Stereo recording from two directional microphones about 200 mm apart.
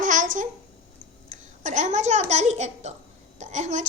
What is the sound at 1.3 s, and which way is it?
A woman's voice, 35° right (ahead or behind).